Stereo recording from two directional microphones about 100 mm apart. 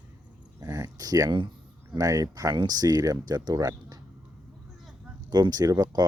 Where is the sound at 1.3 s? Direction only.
50° right (ahead or behind).